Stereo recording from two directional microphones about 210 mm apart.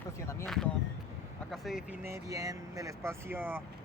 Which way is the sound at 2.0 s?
15° right (ahead or behind).